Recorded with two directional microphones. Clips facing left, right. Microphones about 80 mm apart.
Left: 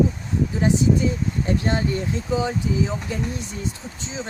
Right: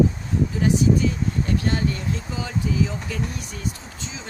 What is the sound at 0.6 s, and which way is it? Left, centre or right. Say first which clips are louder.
Speech: even; left.